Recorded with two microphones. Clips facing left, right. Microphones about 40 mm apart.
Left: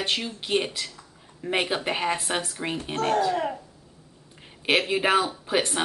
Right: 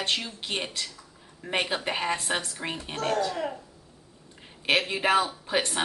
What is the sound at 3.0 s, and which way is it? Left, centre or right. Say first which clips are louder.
Speech: left 4 dB; left.